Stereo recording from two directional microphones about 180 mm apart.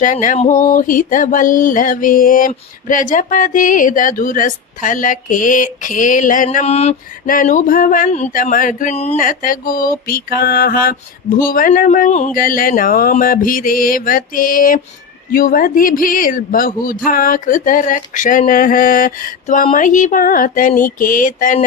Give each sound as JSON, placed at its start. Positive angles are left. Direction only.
{"t": 0.0, "sound": "speech", "side_deg": 45}